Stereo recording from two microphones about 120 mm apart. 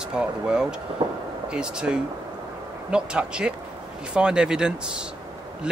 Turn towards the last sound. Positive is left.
turn(degrees=-5)  # may be behind; listen again after turning